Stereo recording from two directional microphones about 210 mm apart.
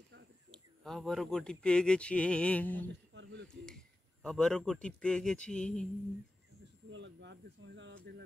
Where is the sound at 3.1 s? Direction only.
60° right (ahead or behind).